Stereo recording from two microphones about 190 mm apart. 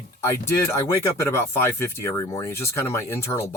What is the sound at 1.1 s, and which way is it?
Speech, 10° left (ahead or behind).